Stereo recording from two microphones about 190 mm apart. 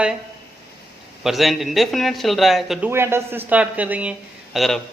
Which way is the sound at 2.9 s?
15° right (ahead or behind).